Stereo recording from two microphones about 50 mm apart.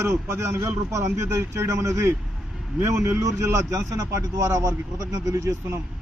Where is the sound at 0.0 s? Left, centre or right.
Right.